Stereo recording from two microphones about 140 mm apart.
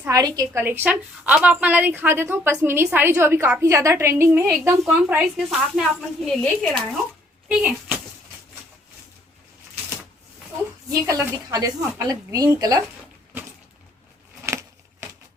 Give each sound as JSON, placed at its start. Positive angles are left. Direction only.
{"t": 0.1, "sound": "speech", "side_deg": -25}
{"t": 0.6, "sound": "a woman's voice", "side_deg": -15}
{"t": 4.8, "sound": "speech", "side_deg": 0}
{"t": 7.4, "sound": "a woman's voice", "side_deg": -10}
{"t": 11.0, "sound": "speech", "side_deg": -20}